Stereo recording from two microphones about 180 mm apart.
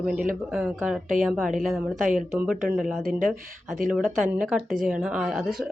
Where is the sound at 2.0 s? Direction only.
45° right (ahead or behind).